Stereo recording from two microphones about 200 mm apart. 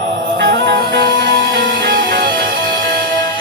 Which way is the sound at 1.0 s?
20° left (ahead or behind).